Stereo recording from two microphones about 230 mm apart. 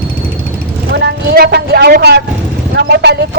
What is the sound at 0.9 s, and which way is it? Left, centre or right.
Speech, right.